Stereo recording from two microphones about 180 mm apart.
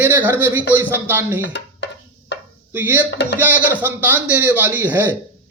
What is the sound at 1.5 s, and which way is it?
Music, 75° left (ahead or behind).